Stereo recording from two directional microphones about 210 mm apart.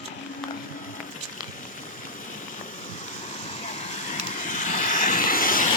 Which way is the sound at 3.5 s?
35° left (ahead or behind).